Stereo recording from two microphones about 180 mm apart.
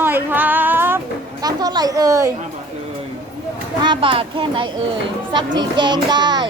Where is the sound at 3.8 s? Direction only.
25° right (ahead or behind).